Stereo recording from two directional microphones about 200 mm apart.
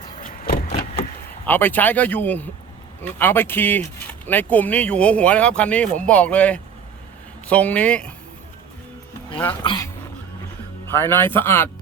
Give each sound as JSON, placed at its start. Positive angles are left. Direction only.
{"t": 0.2, "sound": "vehicle", "side_deg": 45}
{"t": 1.5, "sound": "speech", "side_deg": 10}
{"t": 9.4, "sound": "speech", "side_deg": 20}
{"t": 11.1, "sound": "speech", "side_deg": 10}